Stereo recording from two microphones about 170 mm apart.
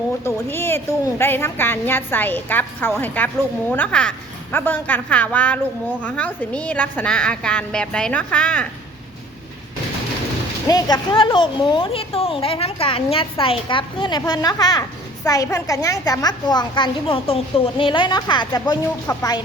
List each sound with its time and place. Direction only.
0.3 s a woman's voice: 15° left (ahead or behind)
10.7 s a woman's voice: 25° left (ahead or behind)